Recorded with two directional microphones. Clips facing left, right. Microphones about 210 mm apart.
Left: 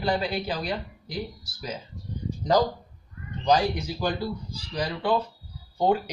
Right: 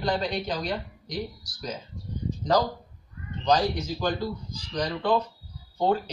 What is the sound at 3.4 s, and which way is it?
Speech, 10° left (ahead or behind).